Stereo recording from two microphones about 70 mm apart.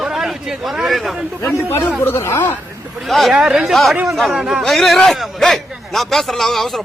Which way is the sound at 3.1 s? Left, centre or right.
Centre.